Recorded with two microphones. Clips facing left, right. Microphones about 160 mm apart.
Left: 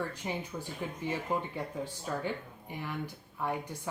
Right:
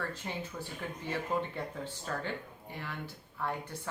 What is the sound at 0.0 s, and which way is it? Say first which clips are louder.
Speech: left 2 dB; 15° left (ahead or behind).